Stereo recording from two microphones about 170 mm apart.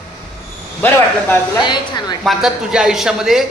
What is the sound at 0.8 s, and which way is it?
Speech, 10° left (ahead or behind).